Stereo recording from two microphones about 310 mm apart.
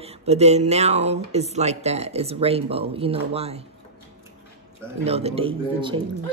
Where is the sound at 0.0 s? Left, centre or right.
Centre.